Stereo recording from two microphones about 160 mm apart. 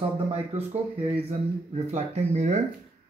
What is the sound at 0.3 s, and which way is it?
Speech, 40° right (ahead or behind).